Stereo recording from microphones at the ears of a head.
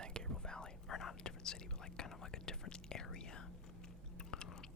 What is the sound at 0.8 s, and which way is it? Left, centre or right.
Speech, left.